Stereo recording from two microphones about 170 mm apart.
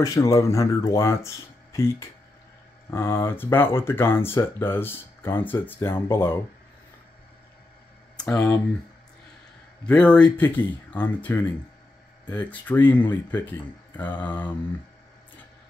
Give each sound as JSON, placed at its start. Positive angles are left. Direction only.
{"t": 0.0, "sound": "speech", "side_deg": 20}
{"t": 8.2, "sound": "speech", "side_deg": 5}
{"t": 9.8, "sound": "speech", "side_deg": 5}